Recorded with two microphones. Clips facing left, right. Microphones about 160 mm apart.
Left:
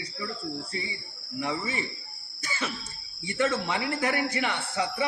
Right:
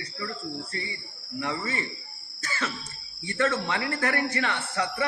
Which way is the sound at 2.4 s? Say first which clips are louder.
Right 1 dB; 10° left (ahead or behind).